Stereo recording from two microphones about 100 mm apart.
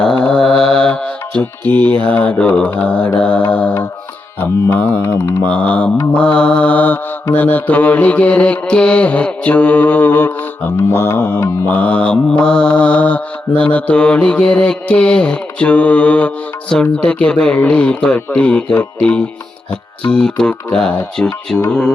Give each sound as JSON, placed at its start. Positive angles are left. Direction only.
{"t": 0.2, "sound": "mantra", "side_deg": 10}
{"t": 5.5, "sound": "mantra", "side_deg": 15}